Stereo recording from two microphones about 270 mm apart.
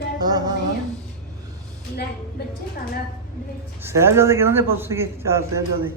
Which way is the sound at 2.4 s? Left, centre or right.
Left.